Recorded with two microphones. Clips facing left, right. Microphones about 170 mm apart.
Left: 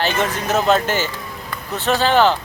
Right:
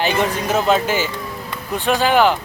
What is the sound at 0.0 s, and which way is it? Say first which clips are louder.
Speech: right 2 dB; 10° right (ahead or behind).